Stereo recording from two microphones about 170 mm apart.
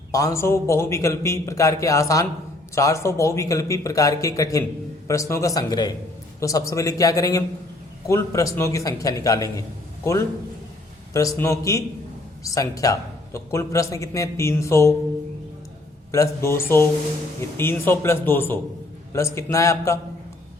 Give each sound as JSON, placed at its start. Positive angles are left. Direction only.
{"t": 0.1, "sound": "a man's voice", "side_deg": 20}
{"t": 16.1, "sound": "a man's voice", "side_deg": 15}